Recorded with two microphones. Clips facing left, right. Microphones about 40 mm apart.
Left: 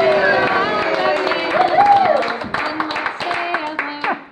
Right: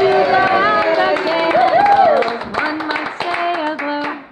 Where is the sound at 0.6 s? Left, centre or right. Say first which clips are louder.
Right 4 dB; right.